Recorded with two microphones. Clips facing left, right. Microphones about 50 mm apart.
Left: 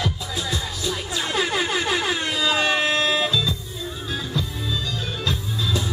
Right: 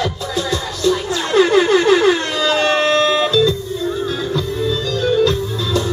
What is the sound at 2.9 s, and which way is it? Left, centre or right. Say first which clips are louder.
Music: right 7 dB; centre.